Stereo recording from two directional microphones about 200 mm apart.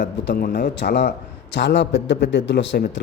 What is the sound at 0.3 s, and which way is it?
A man's voice, 50° left (ahead or behind).